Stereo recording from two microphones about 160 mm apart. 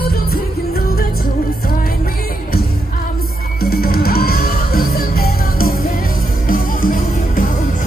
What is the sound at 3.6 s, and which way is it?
Music, 70° left (ahead or behind).